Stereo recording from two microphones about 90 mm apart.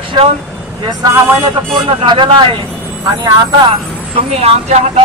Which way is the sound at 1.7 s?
60° right (ahead or behind).